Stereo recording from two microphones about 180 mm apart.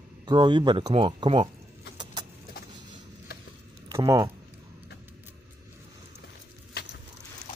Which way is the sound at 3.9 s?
20° right (ahead or behind).